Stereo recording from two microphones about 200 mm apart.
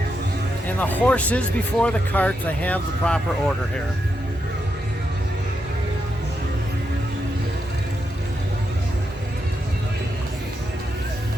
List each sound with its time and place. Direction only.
0.8 s speech: 5° left (ahead or behind)